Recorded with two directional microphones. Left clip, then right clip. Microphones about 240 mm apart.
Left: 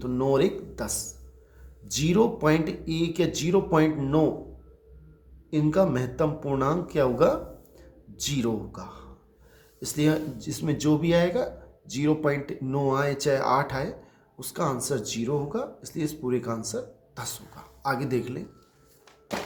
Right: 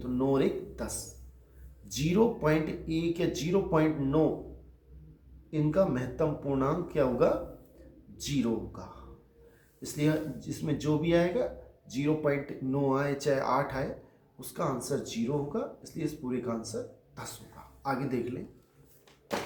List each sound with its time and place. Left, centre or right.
0.0 s speech: left
5.5 s speech: left